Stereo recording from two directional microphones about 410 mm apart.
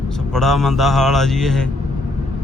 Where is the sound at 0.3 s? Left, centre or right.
Centre.